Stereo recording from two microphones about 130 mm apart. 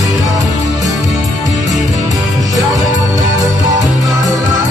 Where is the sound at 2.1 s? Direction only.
25° right (ahead or behind).